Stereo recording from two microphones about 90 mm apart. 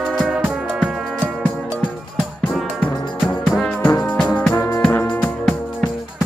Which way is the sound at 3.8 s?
20° left (ahead or behind).